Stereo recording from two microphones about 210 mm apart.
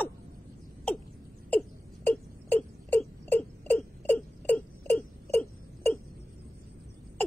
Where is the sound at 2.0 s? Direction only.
10° left (ahead or behind).